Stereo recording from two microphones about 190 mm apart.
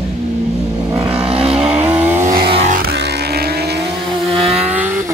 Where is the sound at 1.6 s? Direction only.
10° right (ahead or behind).